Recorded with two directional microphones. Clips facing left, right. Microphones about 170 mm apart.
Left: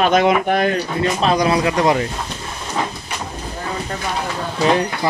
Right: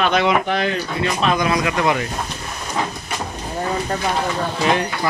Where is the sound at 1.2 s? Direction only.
35° left (ahead or behind).